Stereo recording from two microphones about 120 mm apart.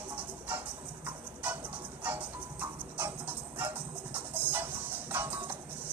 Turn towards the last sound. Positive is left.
turn(degrees=-15)  # may be behind; listen again after turning